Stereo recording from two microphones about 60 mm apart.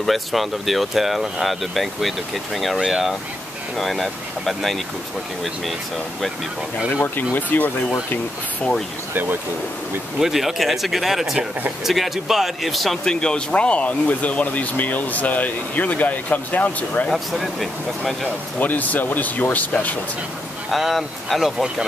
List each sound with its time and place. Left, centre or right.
0.0 s speech: centre
7.3 s speech: left
9.1 s speech: right
10.1 s speech: centre
13.0 s speech: centre
17.1 s speech: centre
18.6 s speech: left
20.7 s speech: centre